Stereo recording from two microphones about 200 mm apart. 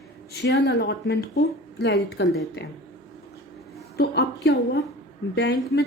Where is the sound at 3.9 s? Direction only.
55° left (ahead or behind).